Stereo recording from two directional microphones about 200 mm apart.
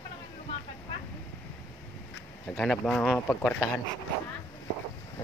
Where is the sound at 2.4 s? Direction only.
Centre (ahead or behind).